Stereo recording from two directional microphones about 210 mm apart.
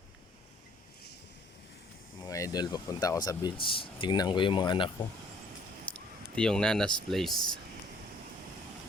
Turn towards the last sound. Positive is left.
turn(degrees=0)  # may be behind; listen again after turning